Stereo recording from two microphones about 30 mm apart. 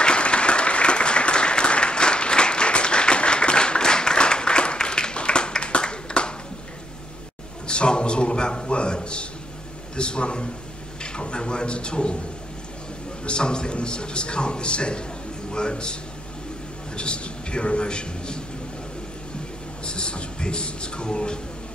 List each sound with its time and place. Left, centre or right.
0.0 s applause: left
7.6 s a sound: left
9.9 s a man's voice: left
13.2 s a man's voice: left
19.8 s a man's voice: left